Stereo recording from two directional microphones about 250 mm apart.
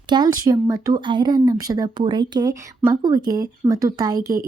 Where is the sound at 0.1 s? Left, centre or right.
Centre.